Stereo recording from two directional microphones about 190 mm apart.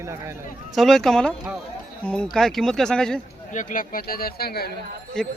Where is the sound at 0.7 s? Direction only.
Centre (ahead or behind).